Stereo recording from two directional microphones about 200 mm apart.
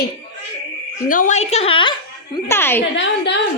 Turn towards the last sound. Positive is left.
turn(degrees=65)  # may be behind; listen again after turning